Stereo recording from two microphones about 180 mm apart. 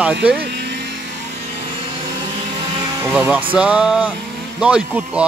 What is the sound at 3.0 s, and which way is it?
Speech, 10° right (ahead or behind).